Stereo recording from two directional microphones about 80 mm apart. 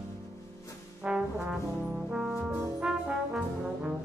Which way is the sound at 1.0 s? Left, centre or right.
Centre.